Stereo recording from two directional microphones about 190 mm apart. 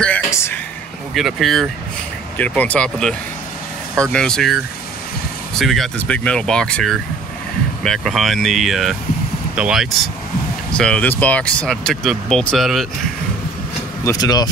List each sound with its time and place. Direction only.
0.0 s a sound: 10° left (ahead or behind)
1.1 s speech: centre (ahead or behind)
5.6 s speech: centre (ahead or behind)
14.0 s speech: 20° left (ahead or behind)